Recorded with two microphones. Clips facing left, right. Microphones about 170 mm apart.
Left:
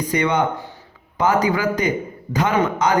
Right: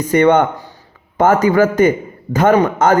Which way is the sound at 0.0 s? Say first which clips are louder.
Right 8 dB; 50° right (ahead or behind).